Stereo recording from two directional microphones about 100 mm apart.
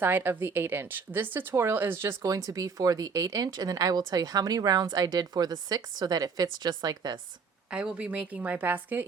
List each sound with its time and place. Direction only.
0.0 s a woman's voice: 20° right (ahead or behind); by 7.2 s 40° right (ahead or behind)
7.7 s a woman's voice: 10° right (ahead or behind)